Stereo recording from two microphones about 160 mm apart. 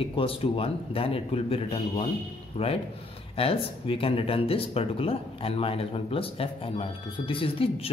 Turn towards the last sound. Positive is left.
turn(degrees=35)  # may be behind; listen again after turning